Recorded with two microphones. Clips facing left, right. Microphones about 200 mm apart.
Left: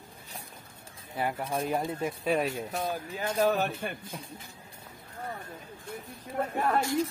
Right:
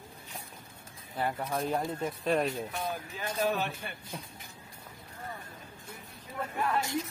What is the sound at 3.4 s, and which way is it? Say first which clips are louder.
Speech: left 4 dB; 45° left (ahead or behind).